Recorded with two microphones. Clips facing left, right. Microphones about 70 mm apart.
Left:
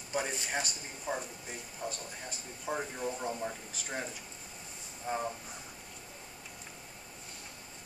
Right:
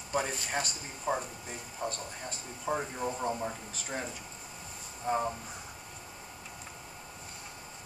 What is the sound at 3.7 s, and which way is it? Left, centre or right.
Speech, centre.